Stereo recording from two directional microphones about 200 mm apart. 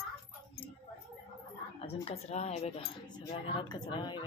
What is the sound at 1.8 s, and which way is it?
Speech, 30° left (ahead or behind).